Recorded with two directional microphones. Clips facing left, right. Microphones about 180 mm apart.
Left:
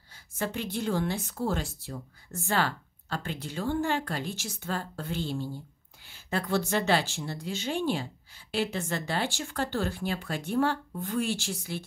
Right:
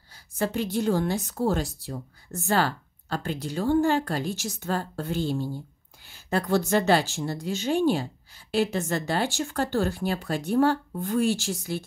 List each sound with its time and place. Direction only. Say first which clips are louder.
0.4 s a woman's voice: right 6 dB; 40° right (ahead or behind)